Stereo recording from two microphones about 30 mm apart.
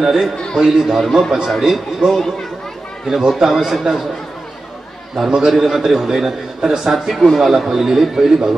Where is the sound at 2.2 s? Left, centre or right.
Centre.